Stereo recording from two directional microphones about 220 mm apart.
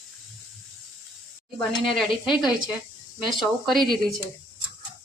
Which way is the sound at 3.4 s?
Centre (ahead or behind).